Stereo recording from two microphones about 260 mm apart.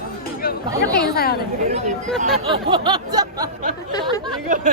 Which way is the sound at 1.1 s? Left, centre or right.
Left.